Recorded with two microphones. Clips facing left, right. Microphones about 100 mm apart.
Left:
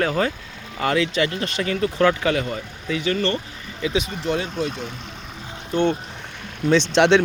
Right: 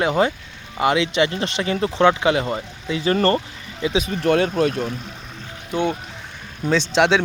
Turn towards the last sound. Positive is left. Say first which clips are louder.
# left 2 dB
turn(degrees=-5)  # may be behind; listen again after turning